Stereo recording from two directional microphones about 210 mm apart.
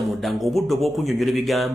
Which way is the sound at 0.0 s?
Centre (ahead or behind).